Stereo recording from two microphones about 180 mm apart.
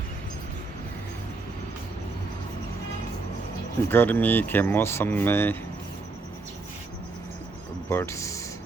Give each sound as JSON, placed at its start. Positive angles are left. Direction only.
{"t": 3.8, "sound": "speech", "side_deg": 10}
{"t": 7.9, "sound": "speech", "side_deg": 15}